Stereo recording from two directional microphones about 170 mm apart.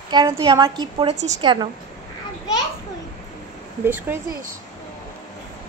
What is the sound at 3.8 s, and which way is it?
Speech, 10° right (ahead or behind).